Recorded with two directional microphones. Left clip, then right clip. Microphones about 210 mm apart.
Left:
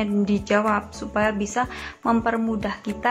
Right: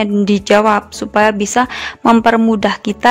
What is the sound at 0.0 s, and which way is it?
Speech, 50° right (ahead or behind).